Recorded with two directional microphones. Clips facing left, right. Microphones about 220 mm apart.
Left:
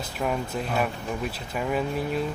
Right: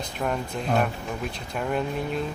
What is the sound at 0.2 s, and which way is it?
Speech, 5° left (ahead or behind).